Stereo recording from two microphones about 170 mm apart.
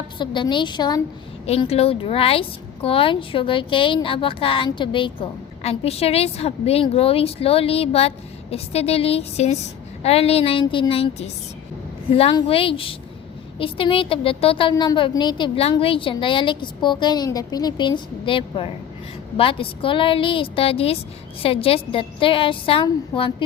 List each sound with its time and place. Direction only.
0.2 s a woman's voice: 25° left (ahead or behind)
1.5 s a woman's voice: 35° left (ahead or behind)